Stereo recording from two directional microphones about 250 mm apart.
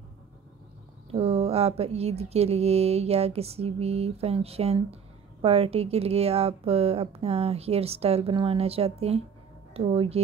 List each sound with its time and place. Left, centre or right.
1.1 s speech: right